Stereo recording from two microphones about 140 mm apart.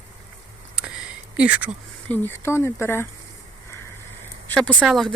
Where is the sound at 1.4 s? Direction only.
10° right (ahead or behind).